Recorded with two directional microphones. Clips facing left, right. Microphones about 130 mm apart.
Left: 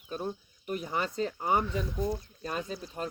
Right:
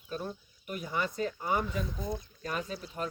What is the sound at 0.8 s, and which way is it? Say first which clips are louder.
Speech: even; 40° left (ahead or behind).